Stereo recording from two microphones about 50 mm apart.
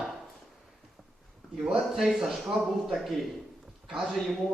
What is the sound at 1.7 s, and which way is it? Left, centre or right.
Speech, centre.